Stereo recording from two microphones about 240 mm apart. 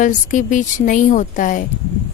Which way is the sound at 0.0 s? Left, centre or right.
Left.